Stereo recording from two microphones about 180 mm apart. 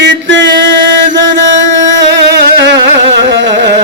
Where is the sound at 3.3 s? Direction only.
75° right (ahead or behind).